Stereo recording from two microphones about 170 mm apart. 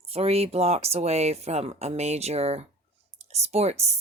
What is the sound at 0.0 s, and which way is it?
Speech, 35° right (ahead or behind).